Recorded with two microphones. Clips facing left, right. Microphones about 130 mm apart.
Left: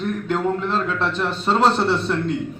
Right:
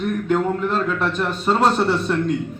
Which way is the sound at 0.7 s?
5° right (ahead or behind).